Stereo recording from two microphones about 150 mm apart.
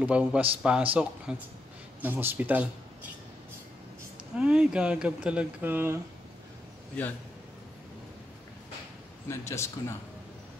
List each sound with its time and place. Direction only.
0.0 s speech: 10° right (ahead or behind)
4.4 s speech: 5° right (ahead or behind)
9.3 s a man's voice: 20° left (ahead or behind)